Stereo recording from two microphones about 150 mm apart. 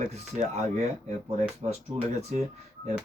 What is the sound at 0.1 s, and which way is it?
Speech, 45° right (ahead or behind).